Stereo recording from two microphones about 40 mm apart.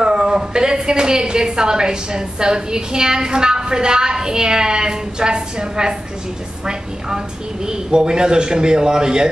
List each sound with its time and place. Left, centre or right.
0.0 s a woman's voice: centre
7.6 s a woman's voice: centre